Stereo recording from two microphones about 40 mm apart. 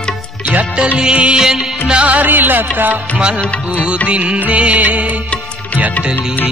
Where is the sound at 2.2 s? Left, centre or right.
Right.